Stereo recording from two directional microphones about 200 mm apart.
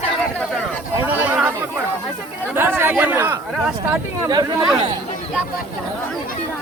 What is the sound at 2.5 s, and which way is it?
Speech, 10° right (ahead or behind).